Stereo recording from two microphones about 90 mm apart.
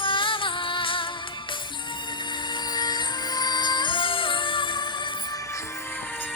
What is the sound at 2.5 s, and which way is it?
Music, 50° left (ahead or behind).